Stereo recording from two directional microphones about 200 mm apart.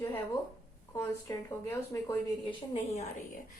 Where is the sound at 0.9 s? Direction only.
15° left (ahead or behind).